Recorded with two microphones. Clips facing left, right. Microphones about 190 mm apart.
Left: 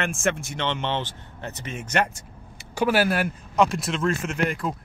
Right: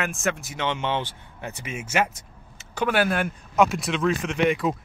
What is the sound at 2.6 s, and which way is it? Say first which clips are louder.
Speech: left 1 dB; 10° left (ahead or behind).